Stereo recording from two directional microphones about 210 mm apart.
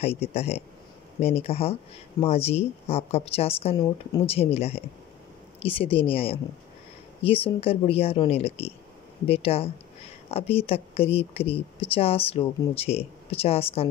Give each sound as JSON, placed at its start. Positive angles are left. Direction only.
{"t": 0.0, "sound": "speech", "side_deg": 30}